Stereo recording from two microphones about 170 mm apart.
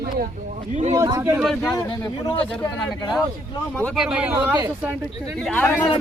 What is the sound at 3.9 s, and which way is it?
Speech, 5° right (ahead or behind).